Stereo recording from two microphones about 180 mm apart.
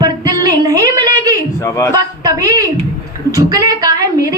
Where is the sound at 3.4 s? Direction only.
20° right (ahead or behind).